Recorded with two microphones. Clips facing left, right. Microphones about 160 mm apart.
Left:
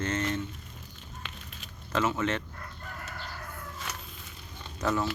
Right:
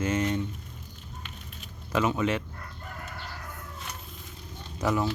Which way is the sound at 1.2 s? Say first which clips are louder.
Even; 90° left.